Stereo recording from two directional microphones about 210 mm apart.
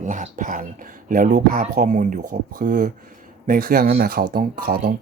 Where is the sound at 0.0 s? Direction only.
35° right (ahead or behind).